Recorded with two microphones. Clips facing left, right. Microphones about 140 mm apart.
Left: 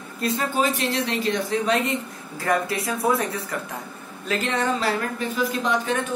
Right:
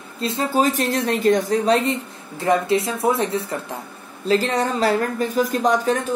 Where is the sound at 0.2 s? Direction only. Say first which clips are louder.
Right 3 dB; 25° right (ahead or behind).